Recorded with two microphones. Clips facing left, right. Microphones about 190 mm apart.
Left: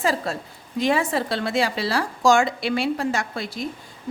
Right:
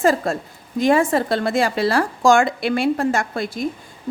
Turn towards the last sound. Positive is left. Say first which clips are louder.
# right 5 dB
turn(degrees=-50)  # may be behind; listen again after turning